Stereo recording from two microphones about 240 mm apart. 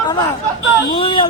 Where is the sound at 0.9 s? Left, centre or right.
Left.